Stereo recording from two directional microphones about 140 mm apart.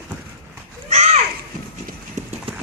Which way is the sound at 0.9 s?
50° right (ahead or behind).